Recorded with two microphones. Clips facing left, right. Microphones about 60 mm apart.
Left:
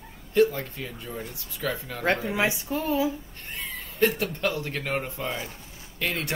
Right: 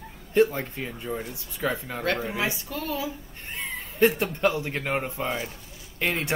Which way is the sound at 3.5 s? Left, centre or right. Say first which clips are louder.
Right 2 dB; right.